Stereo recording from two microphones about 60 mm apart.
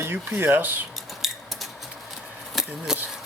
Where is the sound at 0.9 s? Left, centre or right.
Centre.